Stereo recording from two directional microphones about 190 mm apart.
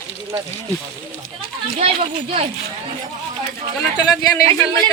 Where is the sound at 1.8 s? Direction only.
35° right (ahead or behind).